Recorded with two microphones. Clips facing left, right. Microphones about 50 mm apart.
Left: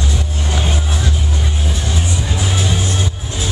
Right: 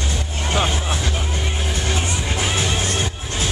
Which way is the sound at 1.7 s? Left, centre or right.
Right.